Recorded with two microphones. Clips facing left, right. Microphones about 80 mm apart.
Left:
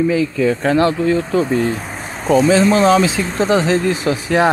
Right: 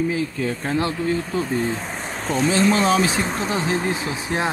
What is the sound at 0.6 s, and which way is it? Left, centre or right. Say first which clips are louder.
Speech: left 7 dB; left.